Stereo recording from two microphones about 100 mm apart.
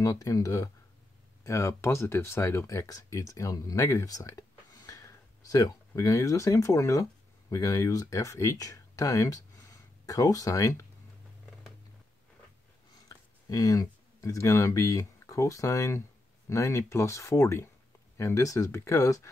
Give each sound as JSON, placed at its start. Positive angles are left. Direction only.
{"t": 0.0, "sound": "speech", "side_deg": 35}
{"t": 13.5, "sound": "speech", "side_deg": 40}